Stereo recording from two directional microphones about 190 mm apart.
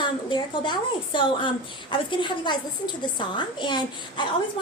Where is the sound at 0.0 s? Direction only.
25° left (ahead or behind).